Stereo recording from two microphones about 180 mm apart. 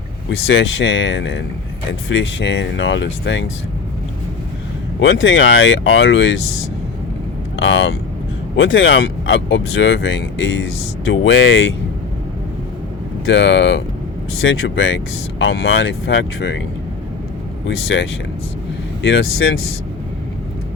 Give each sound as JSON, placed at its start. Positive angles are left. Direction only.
{"t": 0.3, "sound": "speech", "side_deg": 90}
{"t": 4.9, "sound": "speech", "side_deg": 90}
{"t": 7.5, "sound": "speech", "side_deg": 90}
{"t": 13.2, "sound": "speech", "side_deg": 85}
{"t": 17.7, "sound": "speech", "side_deg": 90}